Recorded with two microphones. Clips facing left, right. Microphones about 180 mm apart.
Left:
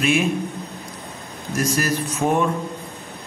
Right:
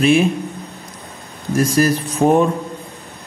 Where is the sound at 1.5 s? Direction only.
35° right (ahead or behind).